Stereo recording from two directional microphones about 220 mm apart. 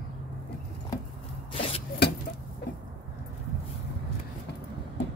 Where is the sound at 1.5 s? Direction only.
25° left (ahead or behind).